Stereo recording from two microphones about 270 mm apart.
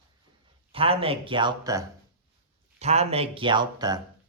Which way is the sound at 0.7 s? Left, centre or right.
Right.